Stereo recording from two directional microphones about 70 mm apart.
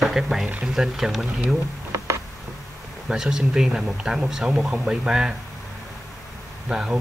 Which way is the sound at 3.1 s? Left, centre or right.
Centre.